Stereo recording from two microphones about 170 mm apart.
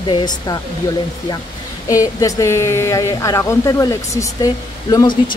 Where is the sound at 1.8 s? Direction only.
20° left (ahead or behind).